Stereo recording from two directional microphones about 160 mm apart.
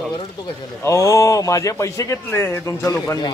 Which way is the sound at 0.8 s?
20° left (ahead or behind).